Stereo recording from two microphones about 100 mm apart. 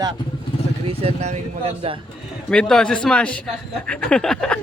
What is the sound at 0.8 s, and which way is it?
Speech, 85° right.